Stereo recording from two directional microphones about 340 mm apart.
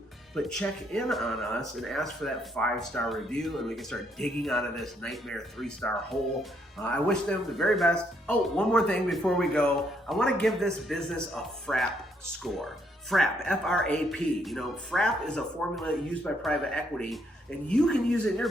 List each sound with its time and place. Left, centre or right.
0.3 s speech: centre
13.1 s speech: centre